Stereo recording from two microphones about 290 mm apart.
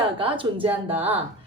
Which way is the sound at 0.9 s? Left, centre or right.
Centre.